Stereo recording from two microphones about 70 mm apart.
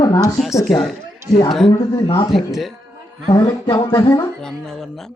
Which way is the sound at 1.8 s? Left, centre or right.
Left.